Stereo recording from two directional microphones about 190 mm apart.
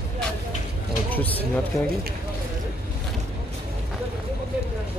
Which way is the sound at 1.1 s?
10° left (ahead or behind).